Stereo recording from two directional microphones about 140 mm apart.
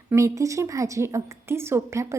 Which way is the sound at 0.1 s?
20° right (ahead or behind).